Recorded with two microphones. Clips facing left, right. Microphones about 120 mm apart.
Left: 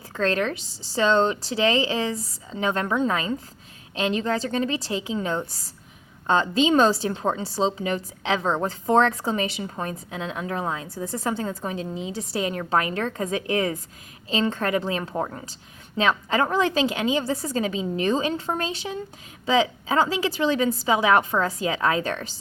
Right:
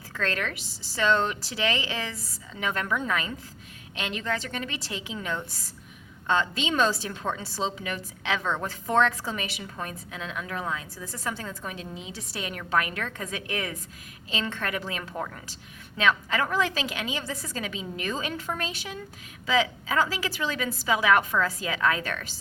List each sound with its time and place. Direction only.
0.1 s a woman's voice: 30° left (ahead or behind)